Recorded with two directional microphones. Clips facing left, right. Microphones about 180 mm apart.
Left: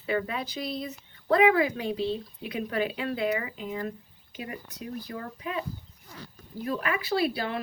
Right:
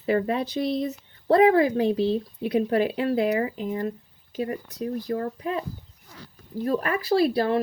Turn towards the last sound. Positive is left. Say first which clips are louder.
# right 7 dB
turn(degrees=-35)  # may be behind; listen again after turning